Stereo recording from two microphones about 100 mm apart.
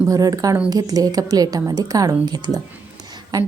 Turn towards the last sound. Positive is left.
turn(degrees=-40)  # may be behind; listen again after turning